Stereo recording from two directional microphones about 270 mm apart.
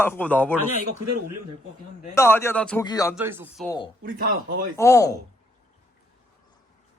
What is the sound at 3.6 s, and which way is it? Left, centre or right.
Speech, centre.